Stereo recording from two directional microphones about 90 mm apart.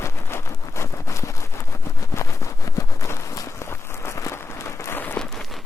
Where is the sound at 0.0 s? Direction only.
30° left (ahead or behind).